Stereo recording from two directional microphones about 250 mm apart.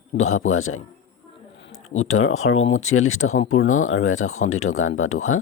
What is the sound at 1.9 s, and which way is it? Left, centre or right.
Speech, left.